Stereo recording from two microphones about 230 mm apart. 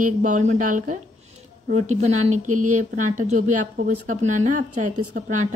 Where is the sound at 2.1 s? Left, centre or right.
Right.